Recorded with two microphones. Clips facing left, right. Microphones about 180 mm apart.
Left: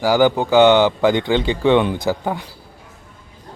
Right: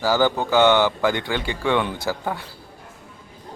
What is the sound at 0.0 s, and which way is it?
Speech, 15° left (ahead or behind).